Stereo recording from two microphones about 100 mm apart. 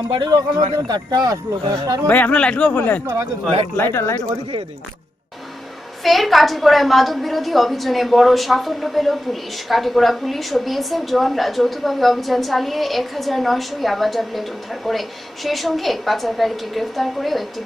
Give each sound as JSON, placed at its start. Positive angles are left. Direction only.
{"t": 0.1, "sound": "speech", "side_deg": -50}
{"t": 2.0, "sound": "speech", "side_deg": 15}
{"t": 6.0, "sound": "a woman's voice", "side_deg": 0}